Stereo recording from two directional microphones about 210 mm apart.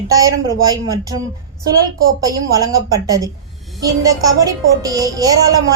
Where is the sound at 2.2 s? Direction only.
15° right (ahead or behind).